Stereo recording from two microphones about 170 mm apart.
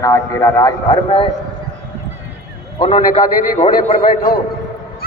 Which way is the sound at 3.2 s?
55° left (ahead or behind).